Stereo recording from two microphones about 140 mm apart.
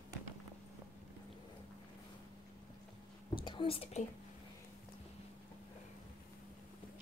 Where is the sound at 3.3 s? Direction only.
35° left (ahead or behind).